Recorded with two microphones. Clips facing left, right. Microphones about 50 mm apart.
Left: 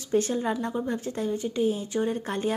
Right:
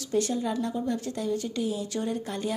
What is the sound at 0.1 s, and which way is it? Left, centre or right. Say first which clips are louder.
A woman's voice: left 2 dB; left.